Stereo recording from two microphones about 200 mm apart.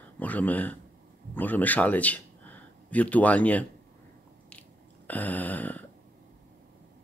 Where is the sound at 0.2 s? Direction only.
10° left (ahead or behind).